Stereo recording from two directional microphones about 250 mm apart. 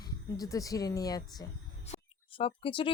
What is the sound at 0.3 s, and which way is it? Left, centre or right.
Speech, centre.